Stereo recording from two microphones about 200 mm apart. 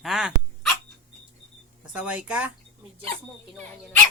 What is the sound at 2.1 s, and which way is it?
Speech, 5° right (ahead or behind).